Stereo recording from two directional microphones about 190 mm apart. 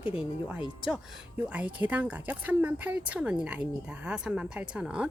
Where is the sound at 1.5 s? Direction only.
5° right (ahead or behind).